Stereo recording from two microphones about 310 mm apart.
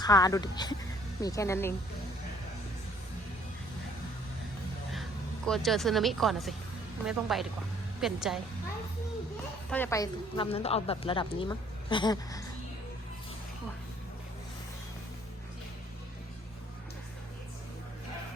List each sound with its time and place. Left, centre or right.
0.0 s a woman's voice: centre
5.5 s speech: centre
9.6 s a woman's voice: centre